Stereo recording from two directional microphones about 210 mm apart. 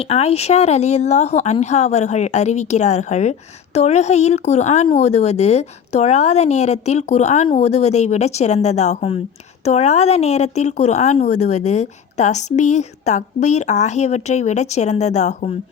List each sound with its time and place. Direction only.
0.0 s speech: 30° left (ahead or behind)